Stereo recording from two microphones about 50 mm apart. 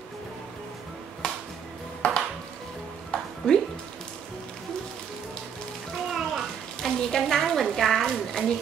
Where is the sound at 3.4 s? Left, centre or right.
Centre.